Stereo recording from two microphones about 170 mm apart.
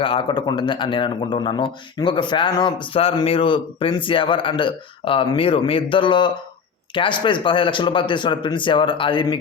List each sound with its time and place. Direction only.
0.0 s a man's voice: 30° left (ahead or behind)